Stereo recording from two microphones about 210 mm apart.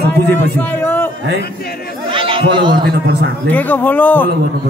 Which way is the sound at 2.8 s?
45° right (ahead or behind).